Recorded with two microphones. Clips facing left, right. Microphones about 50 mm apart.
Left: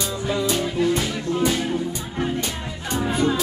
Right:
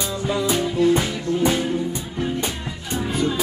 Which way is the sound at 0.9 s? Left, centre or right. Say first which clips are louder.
Right 2 dB; centre.